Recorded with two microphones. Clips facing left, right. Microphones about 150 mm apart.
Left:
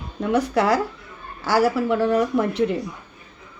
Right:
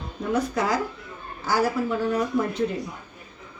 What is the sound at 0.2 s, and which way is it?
A woman's voice, 75° left (ahead or behind).